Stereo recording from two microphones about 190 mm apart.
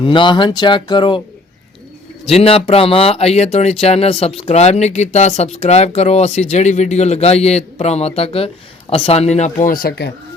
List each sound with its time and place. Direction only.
0.0 s speech: 25° left (ahead or behind)
2.2 s speech: 30° left (ahead or behind); by 10.1 s 55° left (ahead or behind)